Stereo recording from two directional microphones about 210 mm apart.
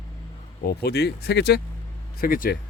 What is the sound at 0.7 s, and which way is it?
Speech, 50° left (ahead or behind).